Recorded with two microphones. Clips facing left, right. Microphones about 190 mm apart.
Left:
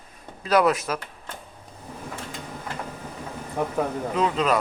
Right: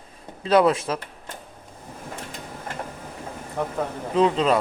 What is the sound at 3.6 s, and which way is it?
Speech, 15° left (ahead or behind).